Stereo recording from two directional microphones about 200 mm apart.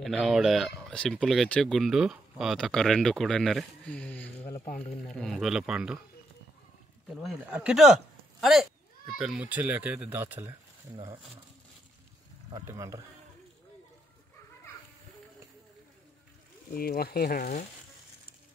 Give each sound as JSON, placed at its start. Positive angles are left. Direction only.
{"t": 0.0, "sound": "speech", "side_deg": 0}
{"t": 7.2, "sound": "speech", "side_deg": -5}
{"t": 12.5, "sound": "speech", "side_deg": -15}
{"t": 16.7, "sound": "speech", "side_deg": 50}